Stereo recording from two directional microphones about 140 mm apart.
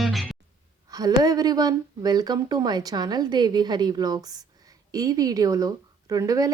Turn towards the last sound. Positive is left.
turn(degrees=-25)  # may be behind; listen again after turning